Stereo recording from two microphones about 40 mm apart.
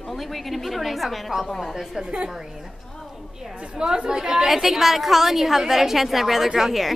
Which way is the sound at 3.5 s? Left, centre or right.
Right.